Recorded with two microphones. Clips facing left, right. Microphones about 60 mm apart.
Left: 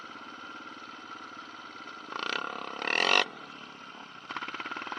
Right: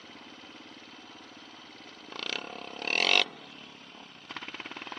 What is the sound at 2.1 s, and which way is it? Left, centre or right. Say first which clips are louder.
Roar: left 4 dB; left.